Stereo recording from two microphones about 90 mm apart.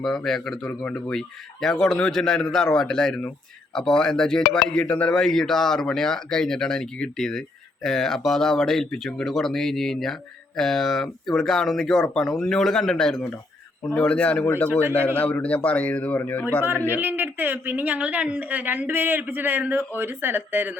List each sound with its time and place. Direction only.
0.0 s speech: 5° left (ahead or behind)
13.9 s a man's voice: 15° left (ahead or behind)
14.4 s a man's voice: 25° left (ahead or behind)
17.0 s a woman's voice: 20° right (ahead or behind)